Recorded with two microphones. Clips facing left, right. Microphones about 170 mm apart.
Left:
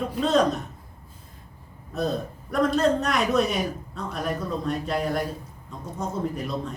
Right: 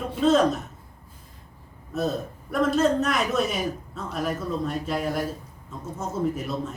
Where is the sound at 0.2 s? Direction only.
Centre (ahead or behind).